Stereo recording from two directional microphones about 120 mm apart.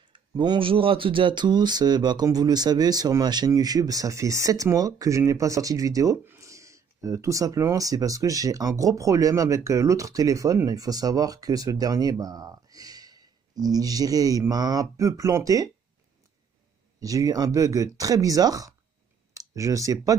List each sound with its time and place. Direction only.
0.1 s speech: 40° right (ahead or behind)
17.0 s speech: 30° right (ahead or behind)